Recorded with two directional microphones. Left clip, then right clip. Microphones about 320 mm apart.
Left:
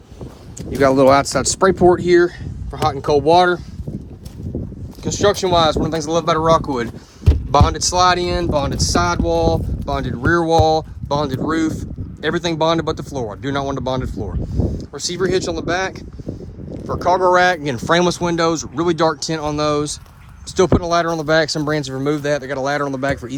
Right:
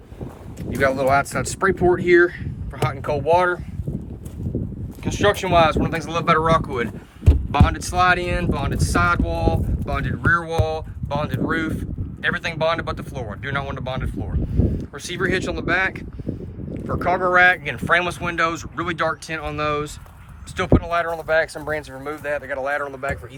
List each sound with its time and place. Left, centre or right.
0.8 s speech: centre
5.0 s speech: centre